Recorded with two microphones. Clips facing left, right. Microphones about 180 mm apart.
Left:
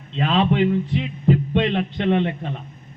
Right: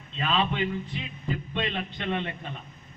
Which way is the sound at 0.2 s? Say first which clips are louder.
Left 8 dB; 65° left (ahead or behind).